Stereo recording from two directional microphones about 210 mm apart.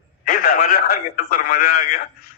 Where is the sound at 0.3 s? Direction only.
45° left (ahead or behind).